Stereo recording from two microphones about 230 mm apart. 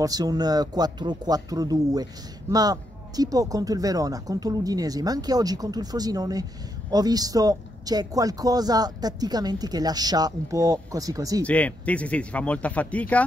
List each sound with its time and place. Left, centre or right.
0.0 s a man's voice: centre
11.4 s speech: centre